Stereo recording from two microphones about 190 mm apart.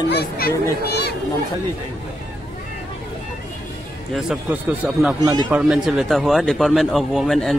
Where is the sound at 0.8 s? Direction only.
60° left (ahead or behind).